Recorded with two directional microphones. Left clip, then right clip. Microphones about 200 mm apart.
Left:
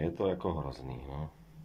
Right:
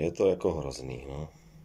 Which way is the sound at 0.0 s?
5° right (ahead or behind).